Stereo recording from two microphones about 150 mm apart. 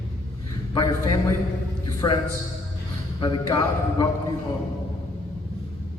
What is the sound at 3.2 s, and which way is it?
Speech, 25° left (ahead or behind).